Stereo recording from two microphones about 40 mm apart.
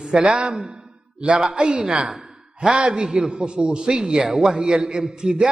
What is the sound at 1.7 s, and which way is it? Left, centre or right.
Speech, right.